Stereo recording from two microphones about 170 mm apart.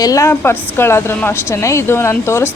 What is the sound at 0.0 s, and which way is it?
Speech, 20° left (ahead or behind).